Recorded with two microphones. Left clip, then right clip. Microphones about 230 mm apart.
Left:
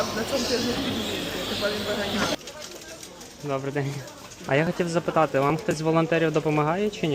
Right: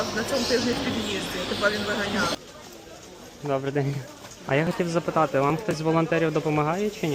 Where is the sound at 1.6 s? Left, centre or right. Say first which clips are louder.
Right 5 dB; right.